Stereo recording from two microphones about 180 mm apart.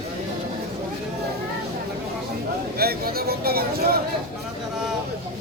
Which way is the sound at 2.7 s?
60° right (ahead or behind).